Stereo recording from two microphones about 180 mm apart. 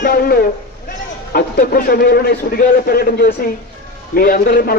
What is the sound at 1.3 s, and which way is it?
A man's voice, 55° left (ahead or behind).